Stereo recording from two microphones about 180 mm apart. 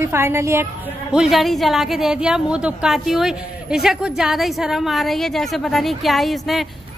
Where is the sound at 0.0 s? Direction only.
15° right (ahead or behind).